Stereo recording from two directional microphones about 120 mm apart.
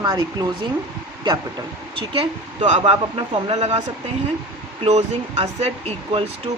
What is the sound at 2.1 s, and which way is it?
Speech, 50° right (ahead or behind).